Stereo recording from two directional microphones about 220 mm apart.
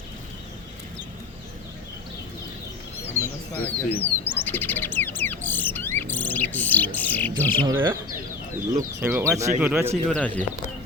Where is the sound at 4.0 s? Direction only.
10° left (ahead or behind).